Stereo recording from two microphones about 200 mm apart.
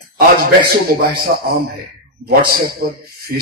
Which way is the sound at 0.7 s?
50° right (ahead or behind).